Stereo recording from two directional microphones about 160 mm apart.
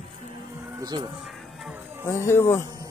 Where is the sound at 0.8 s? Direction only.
25° right (ahead or behind).